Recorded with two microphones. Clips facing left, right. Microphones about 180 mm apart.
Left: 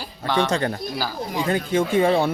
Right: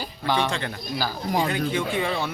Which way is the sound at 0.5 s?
40° left (ahead or behind).